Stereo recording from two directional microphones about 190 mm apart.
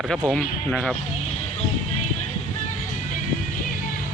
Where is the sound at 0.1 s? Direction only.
5° left (ahead or behind).